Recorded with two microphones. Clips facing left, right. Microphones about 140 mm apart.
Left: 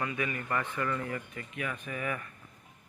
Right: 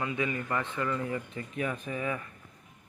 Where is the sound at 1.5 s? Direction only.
35° right (ahead or behind).